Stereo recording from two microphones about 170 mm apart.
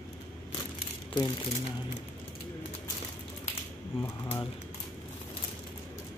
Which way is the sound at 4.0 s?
15° left (ahead or behind).